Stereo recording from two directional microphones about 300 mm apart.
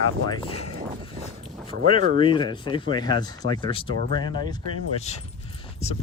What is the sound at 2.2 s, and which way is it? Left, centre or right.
Speech, centre.